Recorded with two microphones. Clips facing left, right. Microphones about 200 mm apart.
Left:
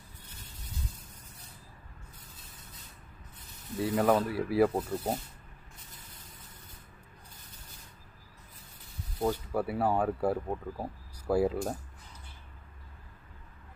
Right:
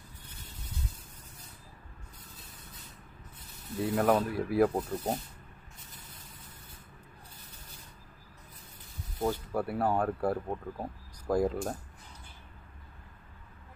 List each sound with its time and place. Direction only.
3.8 s speech: centre (ahead or behind)
9.2 s speech: 5° left (ahead or behind)